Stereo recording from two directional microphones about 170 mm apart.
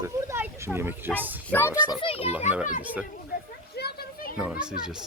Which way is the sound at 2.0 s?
35° left (ahead or behind).